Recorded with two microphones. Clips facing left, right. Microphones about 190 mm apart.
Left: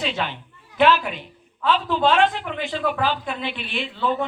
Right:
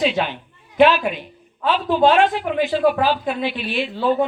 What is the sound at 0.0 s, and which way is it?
A woman's voice, 15° right (ahead or behind).